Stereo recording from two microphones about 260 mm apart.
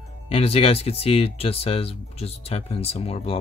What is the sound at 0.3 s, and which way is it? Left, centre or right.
Speech, left.